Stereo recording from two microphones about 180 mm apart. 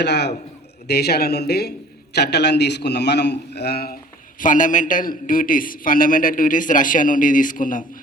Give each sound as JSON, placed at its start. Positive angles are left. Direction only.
{"t": 0.0, "sound": "a man's voice", "side_deg": 70}
{"t": 4.4, "sound": "a man's voice", "side_deg": 45}